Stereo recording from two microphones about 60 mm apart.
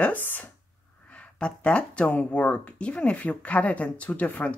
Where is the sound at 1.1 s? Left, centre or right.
Centre.